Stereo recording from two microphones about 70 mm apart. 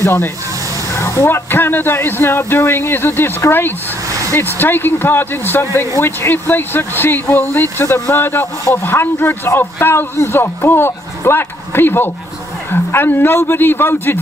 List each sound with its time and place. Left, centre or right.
0.0 s a man's voice: left
0.9 s vehicle: left
1.2 s a man's voice: left
4.1 s a sound: right
4.4 s a man's voice: left